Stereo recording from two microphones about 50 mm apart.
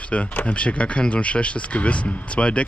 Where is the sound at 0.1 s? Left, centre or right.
Left.